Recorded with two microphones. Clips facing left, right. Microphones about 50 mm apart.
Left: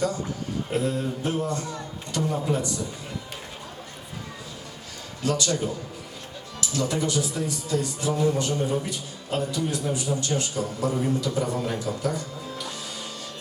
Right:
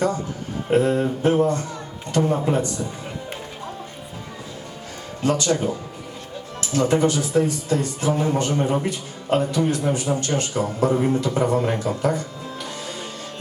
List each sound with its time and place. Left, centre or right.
0.7 s speech: right
5.2 s speech: right